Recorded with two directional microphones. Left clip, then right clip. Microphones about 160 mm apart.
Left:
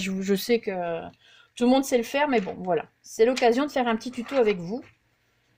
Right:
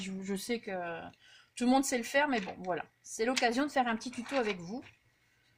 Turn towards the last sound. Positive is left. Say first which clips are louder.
# left 10 dB
turn(degrees=40)  # may be behind; listen again after turning